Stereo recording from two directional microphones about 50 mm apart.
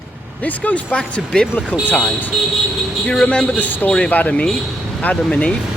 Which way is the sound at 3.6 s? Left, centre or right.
Left.